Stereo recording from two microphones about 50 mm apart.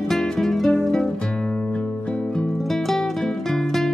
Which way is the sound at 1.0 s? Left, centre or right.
Centre.